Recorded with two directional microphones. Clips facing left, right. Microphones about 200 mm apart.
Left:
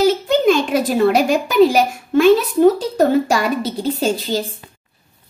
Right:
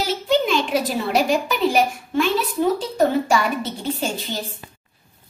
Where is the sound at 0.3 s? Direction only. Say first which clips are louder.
Left 5 dB; 45° left (ahead or behind).